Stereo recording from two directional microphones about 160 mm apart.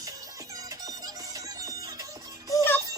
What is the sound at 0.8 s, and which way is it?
Music, 20° right (ahead or behind).